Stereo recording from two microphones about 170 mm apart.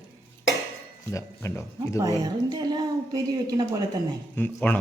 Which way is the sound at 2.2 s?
25° right (ahead or behind).